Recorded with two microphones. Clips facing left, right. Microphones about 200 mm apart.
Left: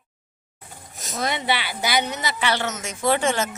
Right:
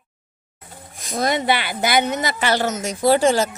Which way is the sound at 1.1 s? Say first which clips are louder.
Right 5 dB; 40° right (ahead or behind).